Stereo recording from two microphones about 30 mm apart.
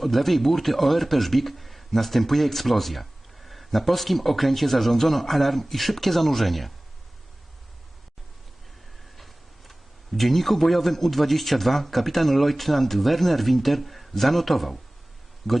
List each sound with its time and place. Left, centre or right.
0.0 s a man's voice: centre
9.1 s a man's voice: centre